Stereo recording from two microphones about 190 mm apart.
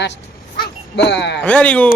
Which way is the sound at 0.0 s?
65° left (ahead or behind).